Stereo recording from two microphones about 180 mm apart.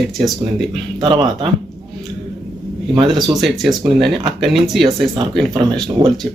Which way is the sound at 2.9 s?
25° right (ahead or behind).